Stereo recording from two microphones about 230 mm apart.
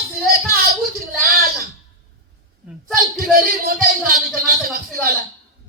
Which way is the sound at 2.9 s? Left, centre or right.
Right.